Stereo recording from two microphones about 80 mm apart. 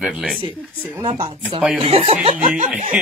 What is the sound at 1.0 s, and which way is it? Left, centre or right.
Speech, right.